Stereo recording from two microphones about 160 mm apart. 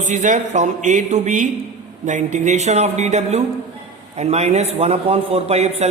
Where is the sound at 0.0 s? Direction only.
50° right (ahead or behind).